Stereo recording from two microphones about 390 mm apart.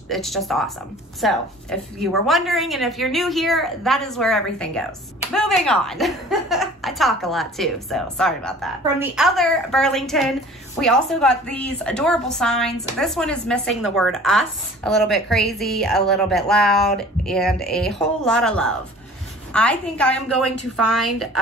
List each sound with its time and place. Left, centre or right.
0.1 s a woman's voice: centre